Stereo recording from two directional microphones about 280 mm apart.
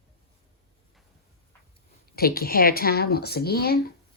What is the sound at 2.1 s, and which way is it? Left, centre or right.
A woman's voice, left.